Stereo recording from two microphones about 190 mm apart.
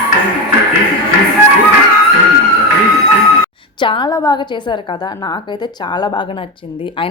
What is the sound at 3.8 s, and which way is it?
A woman's voice, 25° left (ahead or behind).